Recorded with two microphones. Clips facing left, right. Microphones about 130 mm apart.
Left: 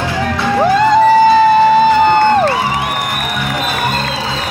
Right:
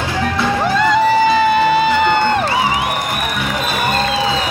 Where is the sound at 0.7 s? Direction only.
40° left (ahead or behind).